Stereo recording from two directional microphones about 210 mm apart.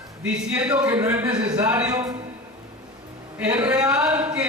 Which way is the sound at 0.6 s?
5° right (ahead or behind).